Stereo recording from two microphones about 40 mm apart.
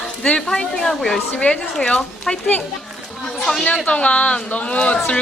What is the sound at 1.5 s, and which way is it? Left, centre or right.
Speech, left.